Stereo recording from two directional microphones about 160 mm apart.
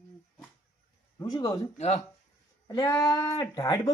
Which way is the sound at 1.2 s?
25° left (ahead or behind).